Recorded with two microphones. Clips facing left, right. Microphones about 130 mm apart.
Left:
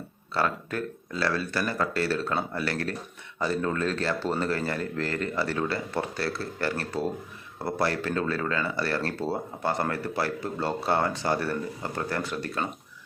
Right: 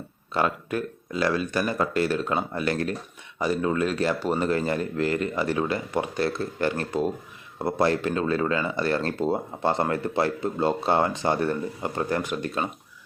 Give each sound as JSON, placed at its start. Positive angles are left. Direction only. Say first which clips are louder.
{"t": 0.3, "sound": "speech", "louder": "right 3 dB", "side_deg": -15}